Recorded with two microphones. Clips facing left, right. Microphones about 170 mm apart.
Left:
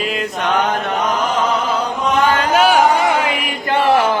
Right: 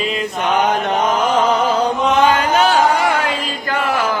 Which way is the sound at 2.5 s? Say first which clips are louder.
Left 1 dB; 10° left (ahead or behind).